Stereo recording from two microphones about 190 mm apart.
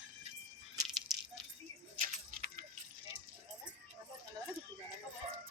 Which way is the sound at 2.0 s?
45° right (ahead or behind).